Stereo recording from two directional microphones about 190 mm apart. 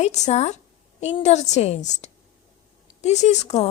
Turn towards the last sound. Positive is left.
turn(degrees=35)  # may be behind; listen again after turning